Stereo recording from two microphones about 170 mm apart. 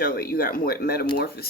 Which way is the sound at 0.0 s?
60° left (ahead or behind).